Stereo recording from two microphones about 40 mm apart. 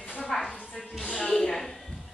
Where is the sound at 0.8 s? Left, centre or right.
Centre.